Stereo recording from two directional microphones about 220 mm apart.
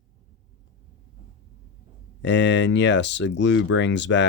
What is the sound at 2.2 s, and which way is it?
Speech, 55° left (ahead or behind).